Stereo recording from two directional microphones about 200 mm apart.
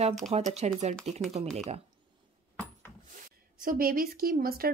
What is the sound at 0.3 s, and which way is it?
Speech, 30° right (ahead or behind).